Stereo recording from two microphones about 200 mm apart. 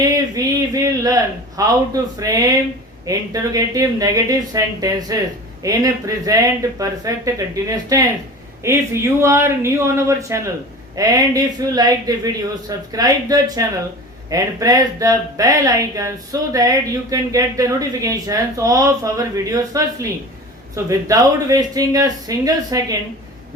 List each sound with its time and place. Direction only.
0.3 s a man's voice: 15° right (ahead or behind)